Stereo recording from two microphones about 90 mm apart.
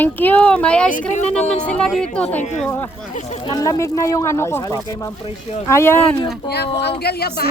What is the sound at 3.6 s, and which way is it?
Speech, 40° left (ahead or behind).